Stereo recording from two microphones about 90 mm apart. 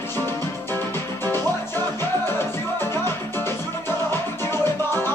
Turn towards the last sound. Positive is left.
turn(degrees=25)  # may be behind; listen again after turning